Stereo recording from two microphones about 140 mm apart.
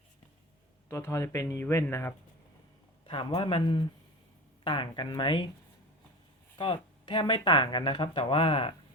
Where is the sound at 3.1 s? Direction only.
40° left (ahead or behind).